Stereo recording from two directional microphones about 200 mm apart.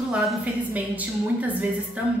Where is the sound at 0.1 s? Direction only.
Centre (ahead or behind).